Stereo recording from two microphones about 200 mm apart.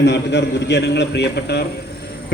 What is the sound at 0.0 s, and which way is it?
A man's voice, 60° left (ahead or behind).